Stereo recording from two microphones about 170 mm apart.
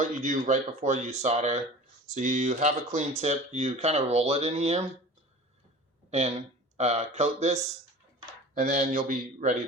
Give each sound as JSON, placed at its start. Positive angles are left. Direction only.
{"t": 0.0, "sound": "speech", "side_deg": -50}
{"t": 6.1, "sound": "speech", "side_deg": -40}